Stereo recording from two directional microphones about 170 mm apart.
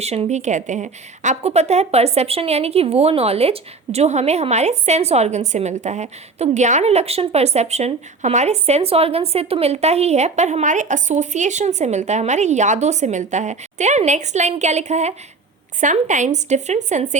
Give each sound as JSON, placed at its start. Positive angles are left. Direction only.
{"t": 0.0, "sound": "a woman's voice", "side_deg": -40}